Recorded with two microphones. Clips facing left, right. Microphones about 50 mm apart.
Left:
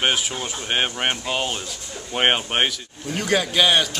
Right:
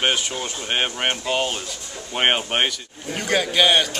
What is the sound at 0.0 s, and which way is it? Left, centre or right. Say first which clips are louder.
Speech: even; centre.